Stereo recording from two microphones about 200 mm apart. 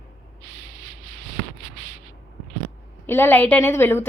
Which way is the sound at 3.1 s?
10° left (ahead or behind).